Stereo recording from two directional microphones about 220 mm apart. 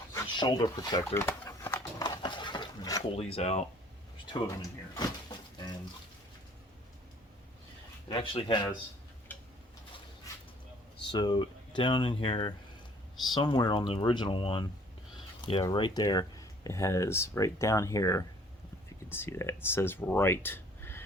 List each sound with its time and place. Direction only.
0.1 s a sound: 20° left (ahead or behind)
3.2 s speech: 30° left (ahead or behind)
4.3 s speech: 20° left (ahead or behind)
4.9 s a sound: 20° left (ahead or behind)
8.1 s speech: 25° left (ahead or behind)
11.1 s speech: 20° left (ahead or behind)